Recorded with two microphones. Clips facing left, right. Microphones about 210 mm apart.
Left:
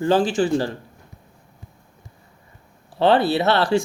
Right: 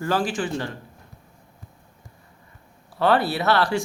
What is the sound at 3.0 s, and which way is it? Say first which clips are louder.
Speech: left 4 dB; 25° left (ahead or behind).